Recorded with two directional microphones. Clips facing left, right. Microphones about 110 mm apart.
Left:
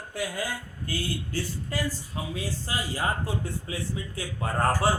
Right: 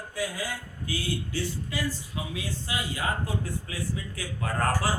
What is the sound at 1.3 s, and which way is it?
A man's voice, 45° left (ahead or behind).